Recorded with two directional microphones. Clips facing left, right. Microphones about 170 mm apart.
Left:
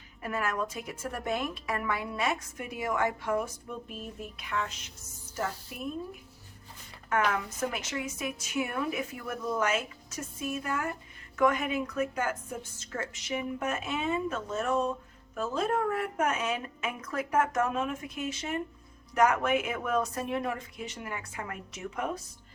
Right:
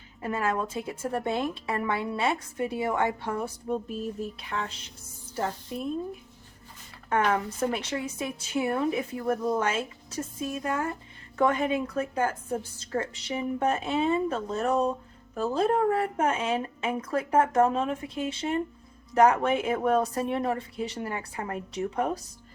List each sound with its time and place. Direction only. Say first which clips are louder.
0.2 s a woman's voice: right 4 dB; 30° right (ahead or behind)
7.1 s a woman's voice: right 3 dB; 30° right (ahead or behind)